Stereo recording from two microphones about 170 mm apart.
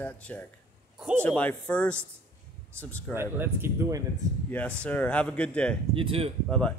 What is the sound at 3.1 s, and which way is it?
Speech, 15° right (ahead or behind).